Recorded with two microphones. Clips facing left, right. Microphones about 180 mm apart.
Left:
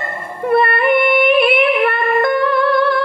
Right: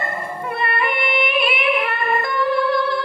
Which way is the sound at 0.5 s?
55° left (ahead or behind).